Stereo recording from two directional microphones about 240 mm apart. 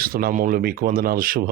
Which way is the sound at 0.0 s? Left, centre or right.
Right.